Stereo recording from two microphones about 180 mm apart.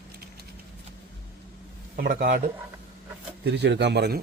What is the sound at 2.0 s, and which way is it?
Speech, 60° right (ahead or behind).